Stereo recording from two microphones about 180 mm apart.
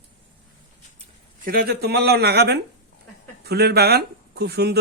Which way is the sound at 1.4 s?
55° right (ahead or behind).